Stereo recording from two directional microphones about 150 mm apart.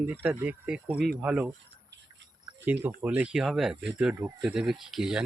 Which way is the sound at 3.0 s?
10° right (ahead or behind).